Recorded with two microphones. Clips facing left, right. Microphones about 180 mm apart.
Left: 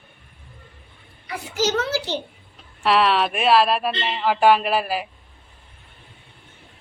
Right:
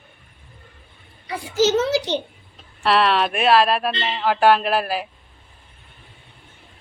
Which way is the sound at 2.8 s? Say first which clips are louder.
Even; 5° left (ahead or behind).